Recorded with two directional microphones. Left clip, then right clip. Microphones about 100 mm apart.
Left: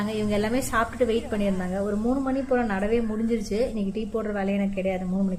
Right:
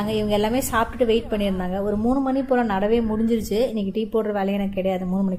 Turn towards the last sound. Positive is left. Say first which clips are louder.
# right 3 dB
turn(degrees=-50)  # may be behind; listen again after turning